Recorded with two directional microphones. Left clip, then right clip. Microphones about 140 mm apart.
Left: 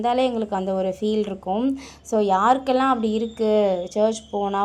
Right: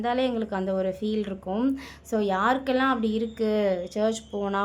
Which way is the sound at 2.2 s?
Centre (ahead or behind).